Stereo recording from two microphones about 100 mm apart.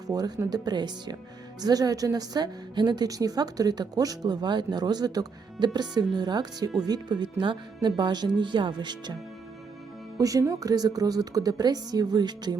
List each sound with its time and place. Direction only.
0.1 s a woman's voice: 40° right (ahead or behind)
10.2 s a woman's voice: 35° right (ahead or behind)